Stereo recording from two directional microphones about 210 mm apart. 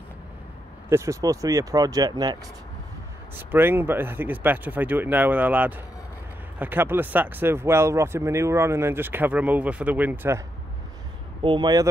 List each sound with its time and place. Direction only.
0.8 s speech: 15° right (ahead or behind)
3.3 s speech: 10° right (ahead or behind)
11.4 s speech: 20° right (ahead or behind)